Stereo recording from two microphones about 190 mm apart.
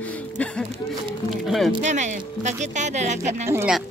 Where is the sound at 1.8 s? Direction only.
40° right (ahead or behind).